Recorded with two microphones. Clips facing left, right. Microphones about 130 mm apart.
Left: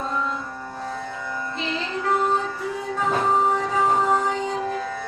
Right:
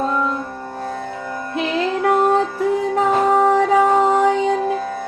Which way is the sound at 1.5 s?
65° right (ahead or behind).